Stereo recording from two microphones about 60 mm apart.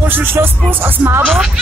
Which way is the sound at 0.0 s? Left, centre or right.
Right.